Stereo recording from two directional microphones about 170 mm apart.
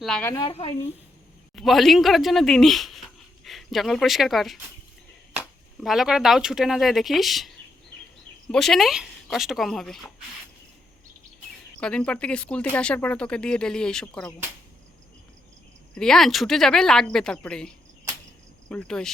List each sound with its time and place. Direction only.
0.0 s speech: 5° left (ahead or behind)
0.4 s speech: 35° left (ahead or behind)
1.5 s speech: centre (ahead or behind)
8.5 s speech: centre (ahead or behind)
11.8 s speech: 5° left (ahead or behind)
16.0 s speech: 5° left (ahead or behind)